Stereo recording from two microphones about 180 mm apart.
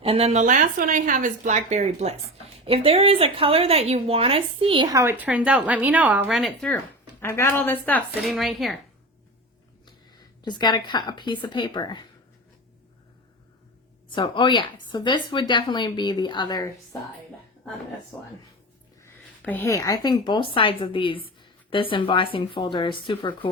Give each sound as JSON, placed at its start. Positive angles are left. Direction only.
{"t": 0.0, "sound": "a woman's voice", "side_deg": -35}
{"t": 10.4, "sound": "speech", "side_deg": 25}
{"t": 14.2, "sound": "speech", "side_deg": 25}
{"t": 18.1, "sound": "a woman's voice", "side_deg": 15}